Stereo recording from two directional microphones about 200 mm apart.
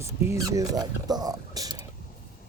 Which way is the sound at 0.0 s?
15° right (ahead or behind).